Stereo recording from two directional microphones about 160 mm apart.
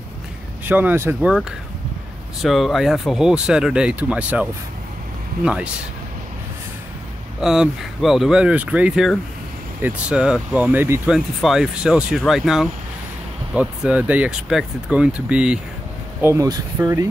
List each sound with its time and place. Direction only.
0.7 s speech: 10° right (ahead or behind)
2.4 s speech: centre (ahead or behind)
7.3 s speech: 5° right (ahead or behind)
16.2 s speech: 20° right (ahead or behind)